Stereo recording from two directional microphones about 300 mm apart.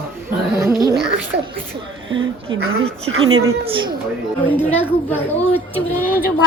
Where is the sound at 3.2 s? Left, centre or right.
Right.